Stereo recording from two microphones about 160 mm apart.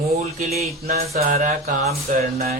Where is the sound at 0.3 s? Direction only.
40° right (ahead or behind).